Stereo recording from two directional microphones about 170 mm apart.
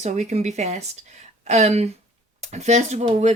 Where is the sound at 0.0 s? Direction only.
45° right (ahead or behind).